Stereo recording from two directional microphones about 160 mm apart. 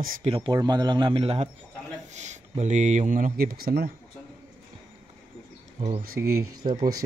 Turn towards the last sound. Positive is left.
turn(degrees=-30)  # may be behind; listen again after turning